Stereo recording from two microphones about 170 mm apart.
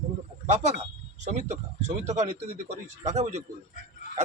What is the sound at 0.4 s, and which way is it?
A man's voice, 45° right (ahead or behind).